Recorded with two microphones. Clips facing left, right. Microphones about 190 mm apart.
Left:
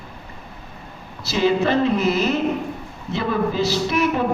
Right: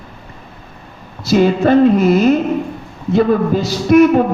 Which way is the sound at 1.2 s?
50° right (ahead or behind).